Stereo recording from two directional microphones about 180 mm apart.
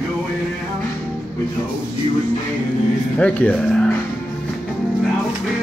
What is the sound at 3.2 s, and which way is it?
Speech, 5° left (ahead or behind).